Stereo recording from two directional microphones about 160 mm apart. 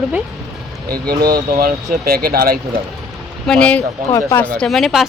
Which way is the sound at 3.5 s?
5° left (ahead or behind).